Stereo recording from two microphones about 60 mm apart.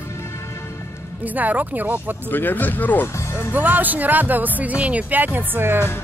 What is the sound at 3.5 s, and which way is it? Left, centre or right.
Speech, right.